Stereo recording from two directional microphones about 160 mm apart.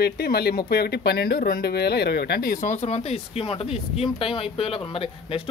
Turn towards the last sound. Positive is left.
turn(degrees=35)  # may be behind; listen again after turning